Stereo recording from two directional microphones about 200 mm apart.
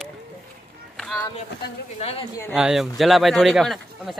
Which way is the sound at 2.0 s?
30° left (ahead or behind).